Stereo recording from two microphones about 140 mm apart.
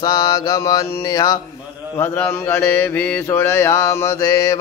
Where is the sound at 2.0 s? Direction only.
15° left (ahead or behind).